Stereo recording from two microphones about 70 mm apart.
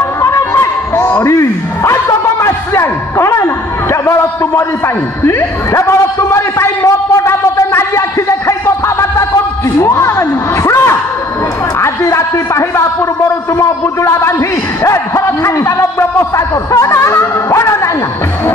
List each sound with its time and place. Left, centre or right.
0.2 s speech: left
7.9 s a sound: left
11.8 s a man's voice: left